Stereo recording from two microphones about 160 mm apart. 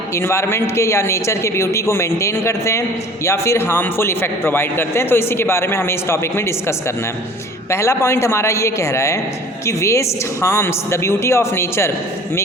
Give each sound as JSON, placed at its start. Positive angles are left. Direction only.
{"t": 0.1, "sound": "a man's voice", "side_deg": 15}